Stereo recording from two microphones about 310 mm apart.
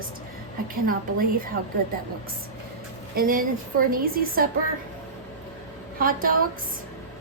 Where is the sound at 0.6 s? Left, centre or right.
Right.